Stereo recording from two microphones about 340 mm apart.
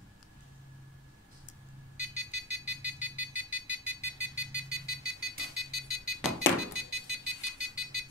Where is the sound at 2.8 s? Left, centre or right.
Centre.